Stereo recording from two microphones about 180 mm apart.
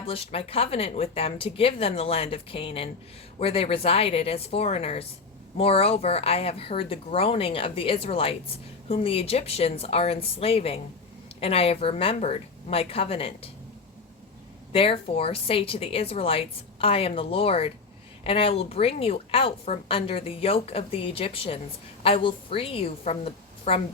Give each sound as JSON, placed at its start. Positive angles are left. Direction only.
{"t": 0.0, "sound": "speech", "side_deg": 30}
{"t": 14.7, "sound": "speech", "side_deg": 30}